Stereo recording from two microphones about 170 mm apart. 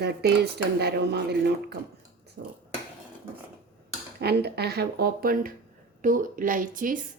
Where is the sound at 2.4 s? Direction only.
90° right.